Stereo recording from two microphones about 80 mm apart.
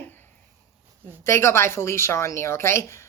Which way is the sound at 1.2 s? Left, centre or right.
Left.